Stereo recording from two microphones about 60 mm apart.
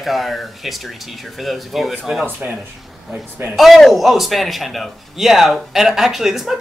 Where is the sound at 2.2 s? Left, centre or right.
Right.